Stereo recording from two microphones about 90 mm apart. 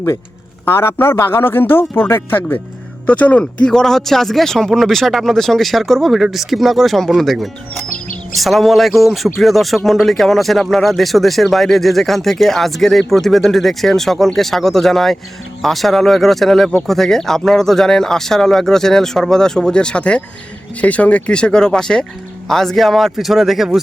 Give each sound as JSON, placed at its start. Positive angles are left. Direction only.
{"t": 0.6, "sound": "a man's voice", "side_deg": 25}
{"t": 3.1, "sound": "speech", "side_deg": 15}